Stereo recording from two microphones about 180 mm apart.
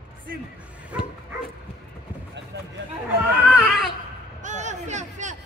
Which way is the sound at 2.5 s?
70° right (ahead or behind).